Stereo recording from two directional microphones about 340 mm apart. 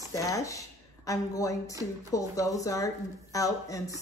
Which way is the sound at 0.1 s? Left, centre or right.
Centre.